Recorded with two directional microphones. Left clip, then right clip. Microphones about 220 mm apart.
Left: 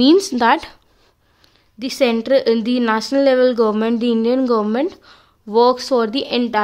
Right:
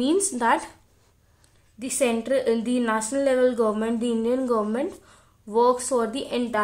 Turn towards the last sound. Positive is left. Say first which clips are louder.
# left 7 dB
turn(degrees=45)  # may be behind; listen again after turning